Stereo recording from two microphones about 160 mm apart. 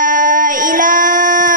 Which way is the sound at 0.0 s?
55° right (ahead or behind).